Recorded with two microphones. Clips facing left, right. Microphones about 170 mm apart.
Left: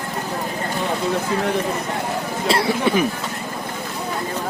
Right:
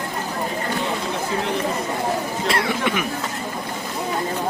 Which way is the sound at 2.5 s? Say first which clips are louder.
Left 5 dB; 30° left (ahead or behind).